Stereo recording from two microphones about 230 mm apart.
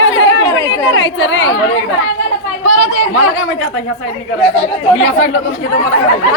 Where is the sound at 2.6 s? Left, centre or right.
Left.